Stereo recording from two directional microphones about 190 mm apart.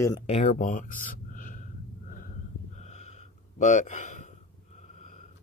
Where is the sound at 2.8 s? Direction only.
35° left (ahead or behind).